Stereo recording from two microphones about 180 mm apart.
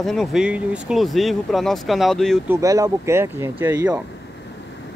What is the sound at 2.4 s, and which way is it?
Speech, 15° right (ahead or behind).